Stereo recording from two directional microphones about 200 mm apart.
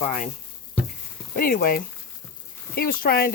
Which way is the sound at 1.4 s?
45° left (ahead or behind).